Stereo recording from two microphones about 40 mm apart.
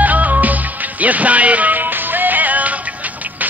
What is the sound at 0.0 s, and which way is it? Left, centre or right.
Music, right.